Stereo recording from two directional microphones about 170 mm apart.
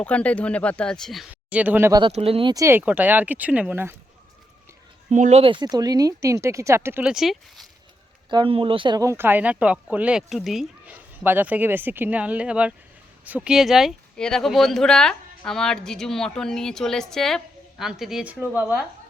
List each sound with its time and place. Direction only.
0.0 s speech: 5° left (ahead or behind); by 1.9 s 10° right (ahead or behind)
1.9 s speech: 25° right (ahead or behind); by 3.9 s 10° right (ahead or behind)
5.1 s speech: 45° right (ahead or behind); by 7.7 s centre (ahead or behind)
8.3 s speech: 30° right (ahead or behind); by 18.9 s 10° right (ahead or behind)